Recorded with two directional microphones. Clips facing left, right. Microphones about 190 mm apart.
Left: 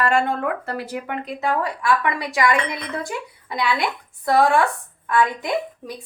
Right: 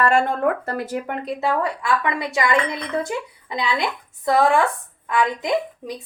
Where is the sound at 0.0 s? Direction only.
45° right (ahead or behind).